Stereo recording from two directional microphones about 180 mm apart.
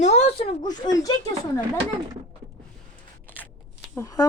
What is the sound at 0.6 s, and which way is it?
Speech, 20° left (ahead or behind).